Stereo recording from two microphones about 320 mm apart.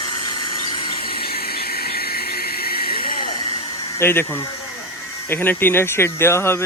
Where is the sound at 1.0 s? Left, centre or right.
Left.